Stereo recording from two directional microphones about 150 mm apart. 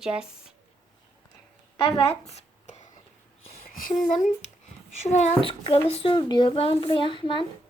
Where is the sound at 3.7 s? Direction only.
65° left (ahead or behind).